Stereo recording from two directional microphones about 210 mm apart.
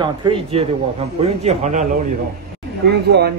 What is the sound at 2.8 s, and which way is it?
Speech, 50° right (ahead or behind).